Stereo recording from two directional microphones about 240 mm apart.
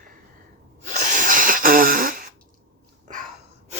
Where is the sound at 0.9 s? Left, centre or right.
Right.